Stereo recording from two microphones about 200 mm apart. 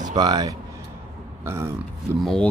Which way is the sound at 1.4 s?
15° right (ahead or behind).